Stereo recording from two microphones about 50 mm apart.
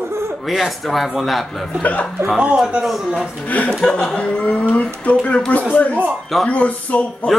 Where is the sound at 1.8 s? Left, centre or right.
Left.